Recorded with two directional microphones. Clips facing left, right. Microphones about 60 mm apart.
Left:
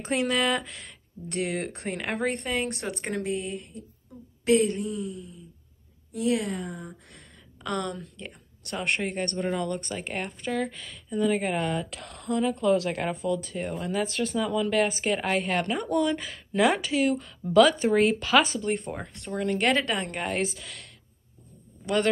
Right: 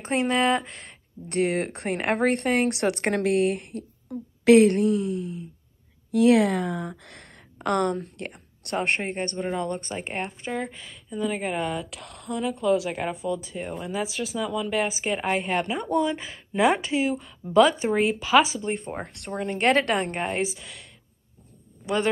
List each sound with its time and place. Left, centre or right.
0.0 s speech: right
1.3 s a woman's voice: right
7.5 s a woman's voice: right
17.9 s speech: centre
19.3 s speech: right
19.7 s a woman's voice: right
20.1 s speech: right
20.3 s speech: centre